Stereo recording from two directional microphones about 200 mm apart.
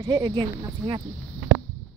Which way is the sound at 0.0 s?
20° right (ahead or behind).